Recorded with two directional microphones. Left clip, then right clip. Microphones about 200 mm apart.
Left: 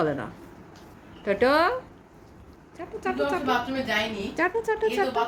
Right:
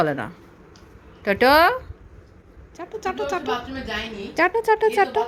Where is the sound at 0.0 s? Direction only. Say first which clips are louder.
Right 4 dB; 40° right (ahead or behind).